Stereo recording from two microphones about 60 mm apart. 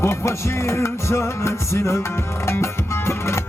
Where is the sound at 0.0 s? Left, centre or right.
Left.